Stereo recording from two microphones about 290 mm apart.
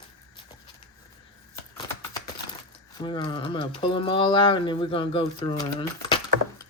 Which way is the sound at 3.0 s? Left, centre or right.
Centre.